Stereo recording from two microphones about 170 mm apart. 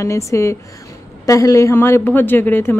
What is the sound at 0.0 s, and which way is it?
Speech, 15° left (ahead or behind).